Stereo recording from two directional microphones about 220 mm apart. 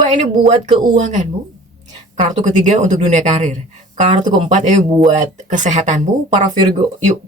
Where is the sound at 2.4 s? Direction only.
35° right (ahead or behind).